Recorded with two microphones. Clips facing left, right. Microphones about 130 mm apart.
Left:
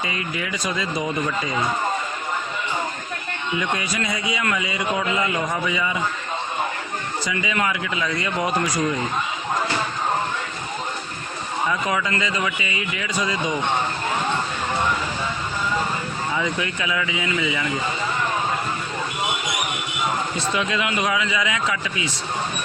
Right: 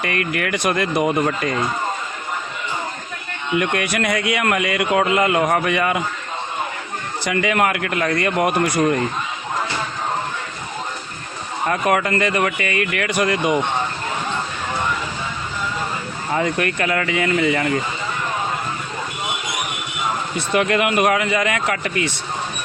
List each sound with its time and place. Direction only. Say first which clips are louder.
0.0 s a man's voice: right 5 dB; 65° right (ahead or behind)
3.5 s a man's voice: right 5 dB; 65° right (ahead or behind)
7.3 s a man's voice: right 6 dB; 60° right (ahead or behind)
11.7 s a man's voice: right 7 dB; 60° right (ahead or behind)
16.3 s a man's voice: right 7 dB; 60° right (ahead or behind)
20.5 s a man's voice: right 8 dB; 60° right (ahead or behind)